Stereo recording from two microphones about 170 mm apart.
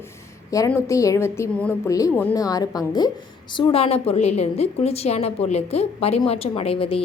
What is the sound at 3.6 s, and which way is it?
A woman's voice, 35° left (ahead or behind).